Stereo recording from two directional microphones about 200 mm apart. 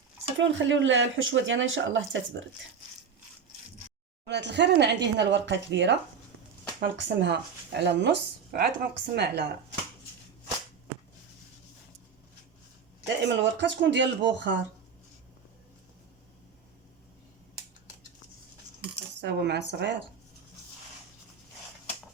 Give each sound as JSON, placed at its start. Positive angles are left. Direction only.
{"t": 0.3, "sound": "speech", "side_deg": -70}
{"t": 4.3, "sound": "speech", "side_deg": -60}
{"t": 13.2, "sound": "speech", "side_deg": -60}
{"t": 19.2, "sound": "speech", "side_deg": -55}